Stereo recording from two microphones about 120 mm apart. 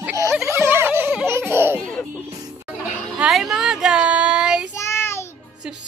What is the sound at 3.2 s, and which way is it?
Child singing, 5° right (ahead or behind).